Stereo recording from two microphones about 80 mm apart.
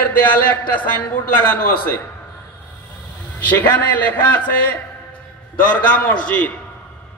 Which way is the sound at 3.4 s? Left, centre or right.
Left.